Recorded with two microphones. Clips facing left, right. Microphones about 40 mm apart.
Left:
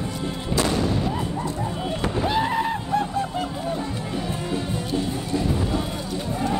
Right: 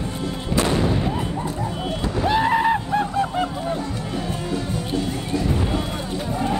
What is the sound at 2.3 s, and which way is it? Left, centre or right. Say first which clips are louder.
Music: right 6 dB; right.